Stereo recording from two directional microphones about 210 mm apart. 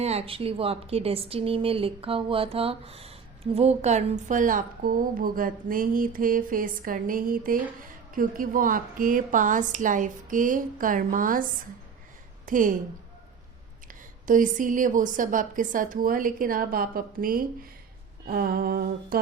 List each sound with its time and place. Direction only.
0.0 s a woman's voice: 30° right (ahead or behind)
12.5 s a woman's voice: 40° right (ahead or behind)
14.3 s a woman's voice: 40° right (ahead or behind)
18.3 s a sound: 45° right (ahead or behind)